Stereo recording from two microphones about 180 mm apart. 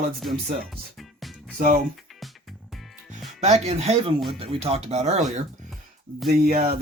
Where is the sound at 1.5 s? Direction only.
50° right (ahead or behind).